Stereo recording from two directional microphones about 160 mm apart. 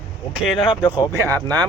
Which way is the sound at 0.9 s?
20° right (ahead or behind).